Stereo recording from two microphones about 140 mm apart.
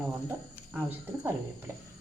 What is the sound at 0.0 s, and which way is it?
Speech, 10° right (ahead or behind).